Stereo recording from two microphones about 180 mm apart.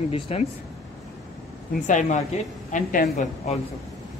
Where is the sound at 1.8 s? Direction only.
45° left (ahead or behind).